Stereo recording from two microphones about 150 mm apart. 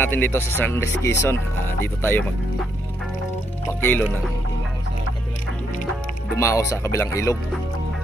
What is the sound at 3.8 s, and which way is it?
Speech, 10° left (ahead or behind).